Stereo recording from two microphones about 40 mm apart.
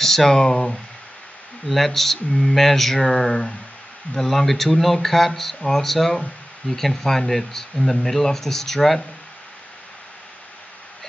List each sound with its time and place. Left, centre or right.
0.0 s speech: centre